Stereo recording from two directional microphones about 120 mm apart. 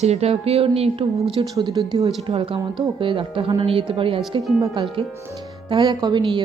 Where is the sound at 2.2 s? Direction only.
50° right (ahead or behind).